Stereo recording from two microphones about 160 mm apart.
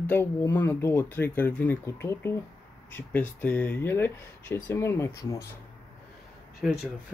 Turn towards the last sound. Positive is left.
turn(degrees=-5)  # may be behind; listen again after turning